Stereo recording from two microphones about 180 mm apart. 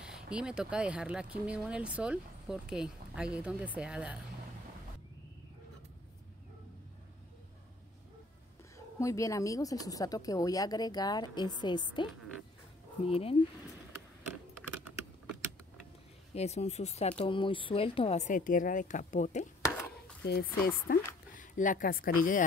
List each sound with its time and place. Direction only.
0.0 s speech: 5° right (ahead or behind)
8.7 s a woman's voice: 15° left (ahead or behind); by 13.4 s 30° left (ahead or behind)
16.3 s speech: 35° left (ahead or behind)
20.2 s speech: 65° left (ahead or behind)